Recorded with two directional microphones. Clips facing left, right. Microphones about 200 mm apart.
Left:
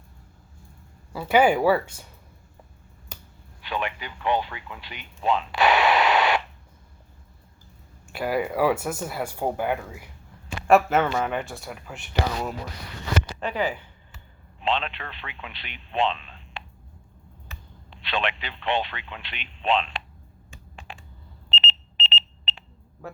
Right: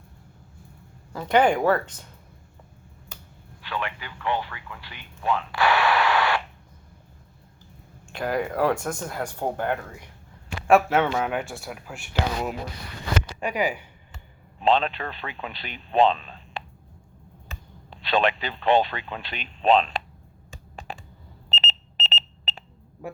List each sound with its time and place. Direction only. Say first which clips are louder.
1.3 s speech: left 1 dB; 5° left (ahead or behind)
3.6 s speech: left 2 dB; 15° left (ahead or behind)
8.0 s a man's voice: left 1 dB; 5° left (ahead or behind)
13.4 s speech: right 4 dB; 10° right (ahead or behind)
14.6 s speech: right 5 dB; 40° right (ahead or behind)
17.9 s speech: right 6 dB; 40° right (ahead or behind)
20.5 s a sound: right 5 dB; 40° right (ahead or behind)
21.5 s alarm: left 1 dB; 40° right (ahead or behind)
23.0 s a sound: right 3 dB; 15° right (ahead or behind)